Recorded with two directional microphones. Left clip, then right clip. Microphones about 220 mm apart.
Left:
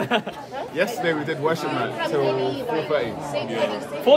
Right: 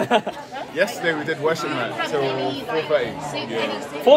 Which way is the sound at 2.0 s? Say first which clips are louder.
Left 1 dB; 45° left (ahead or behind).